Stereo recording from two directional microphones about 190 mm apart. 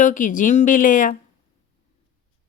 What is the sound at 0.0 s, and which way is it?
A woman's voice, 40° left (ahead or behind).